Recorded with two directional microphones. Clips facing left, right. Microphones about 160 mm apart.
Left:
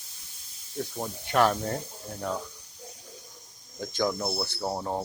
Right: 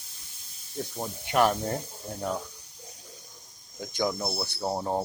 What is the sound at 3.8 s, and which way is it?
Speech, 10° right (ahead or behind).